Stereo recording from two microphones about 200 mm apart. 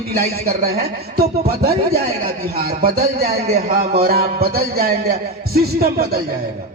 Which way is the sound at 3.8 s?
45° right (ahead or behind).